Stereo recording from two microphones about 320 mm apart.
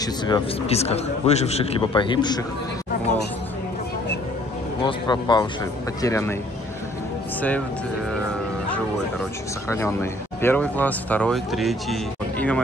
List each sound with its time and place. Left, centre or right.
0.0 s a man's voice: centre
4.8 s a man's voice: centre
9.7 s a man's voice: centre